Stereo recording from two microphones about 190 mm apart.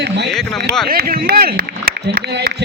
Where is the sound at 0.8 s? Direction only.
55° right (ahead or behind).